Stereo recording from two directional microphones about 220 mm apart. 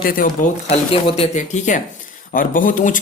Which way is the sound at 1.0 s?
25° left (ahead or behind).